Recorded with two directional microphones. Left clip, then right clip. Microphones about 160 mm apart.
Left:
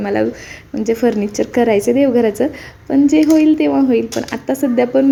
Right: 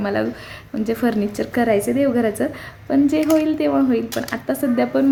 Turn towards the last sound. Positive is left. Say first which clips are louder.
# left 5 dB
turn(degrees=10)  # may be behind; listen again after turning